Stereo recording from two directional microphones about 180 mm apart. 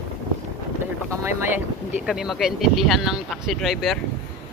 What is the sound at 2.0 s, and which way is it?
Speech, centre (ahead or behind).